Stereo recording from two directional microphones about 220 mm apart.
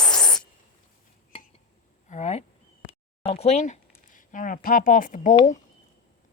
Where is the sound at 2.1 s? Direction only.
30° left (ahead or behind).